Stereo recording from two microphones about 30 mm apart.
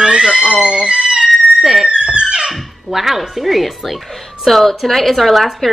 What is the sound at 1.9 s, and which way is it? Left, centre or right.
Music, right.